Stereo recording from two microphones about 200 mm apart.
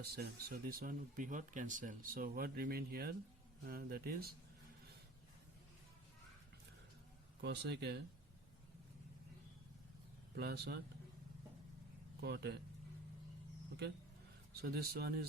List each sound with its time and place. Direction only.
0.0 s speech: 50° right (ahead or behind)
7.4 s speech: 55° right (ahead or behind)
10.3 s speech: 55° right (ahead or behind)
12.2 s speech: 55° right (ahead or behind)
14.5 s speech: 50° right (ahead or behind)